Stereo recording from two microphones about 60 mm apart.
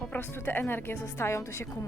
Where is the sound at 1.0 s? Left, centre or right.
Left.